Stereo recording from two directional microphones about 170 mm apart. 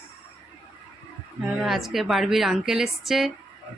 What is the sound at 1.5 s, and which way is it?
Speech, centre (ahead or behind).